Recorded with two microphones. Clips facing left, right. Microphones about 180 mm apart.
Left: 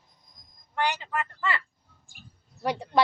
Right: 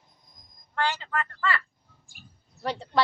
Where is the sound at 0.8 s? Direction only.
15° left (ahead or behind).